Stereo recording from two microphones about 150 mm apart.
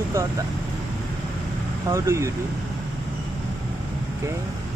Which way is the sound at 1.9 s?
20° right (ahead or behind).